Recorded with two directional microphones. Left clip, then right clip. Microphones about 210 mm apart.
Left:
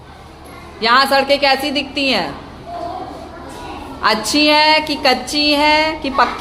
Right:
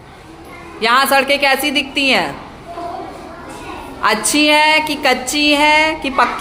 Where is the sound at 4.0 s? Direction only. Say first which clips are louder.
Even; 10° right (ahead or behind).